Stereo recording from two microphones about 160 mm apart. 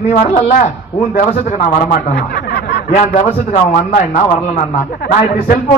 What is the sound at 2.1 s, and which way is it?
Snicker, 90° left.